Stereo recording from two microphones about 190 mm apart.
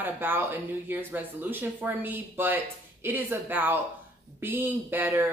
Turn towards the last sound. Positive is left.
turn(degrees=-10)  # may be behind; listen again after turning